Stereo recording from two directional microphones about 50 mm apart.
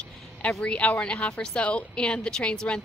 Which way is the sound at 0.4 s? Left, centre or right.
Left.